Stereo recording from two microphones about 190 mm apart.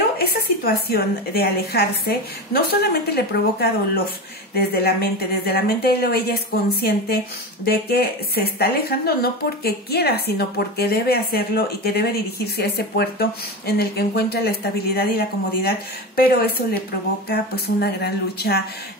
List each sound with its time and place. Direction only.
0.7 s speech: 55° left (ahead or behind)